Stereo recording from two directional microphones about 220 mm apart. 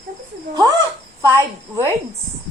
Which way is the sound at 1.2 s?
15° right (ahead or behind).